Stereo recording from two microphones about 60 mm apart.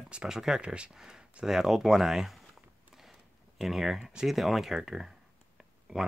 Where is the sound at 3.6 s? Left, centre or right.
Centre.